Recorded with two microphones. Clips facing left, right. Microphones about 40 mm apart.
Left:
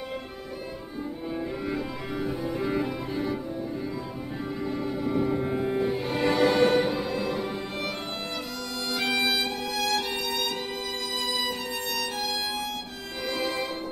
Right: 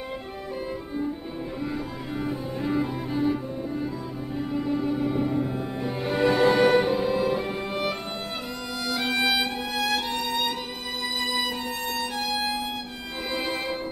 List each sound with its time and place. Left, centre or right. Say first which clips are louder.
2.1 s cello: left 1 dB; centre
4.6 s music: right 6 dB; centre
5.0 s music: right 1 dB; centre
5.4 s cello: left 2 dB; left
6.0 s music: right 5 dB; right
8.9 s music: right 2 dB; centre
12.2 s violin: right 3 dB; right
13.3 s music: even; right